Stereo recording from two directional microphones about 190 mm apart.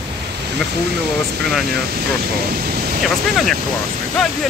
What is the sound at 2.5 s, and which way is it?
Speech, 50° right (ahead or behind).